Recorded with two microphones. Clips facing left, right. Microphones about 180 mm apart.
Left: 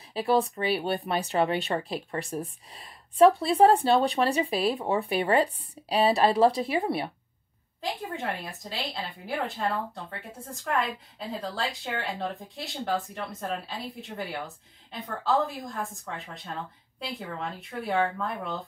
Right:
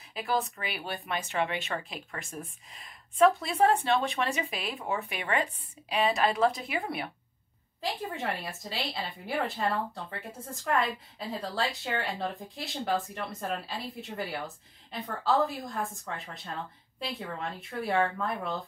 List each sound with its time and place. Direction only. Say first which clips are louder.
0.1 s a woman's voice: left 6 dB; 30° left (ahead or behind)
7.8 s a woman's voice: left 1 dB; centre (ahead or behind)
17.0 s a woman's voice: left 1 dB; centre (ahead or behind)